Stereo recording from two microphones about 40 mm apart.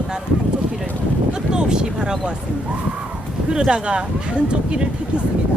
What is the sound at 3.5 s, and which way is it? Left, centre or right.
Speech, right.